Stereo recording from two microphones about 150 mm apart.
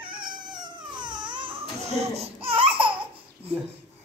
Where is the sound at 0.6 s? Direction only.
30° right (ahead or behind).